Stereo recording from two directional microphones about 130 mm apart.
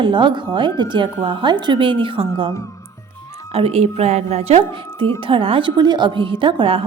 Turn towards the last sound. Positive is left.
turn(degrees=-40)  # may be behind; listen again after turning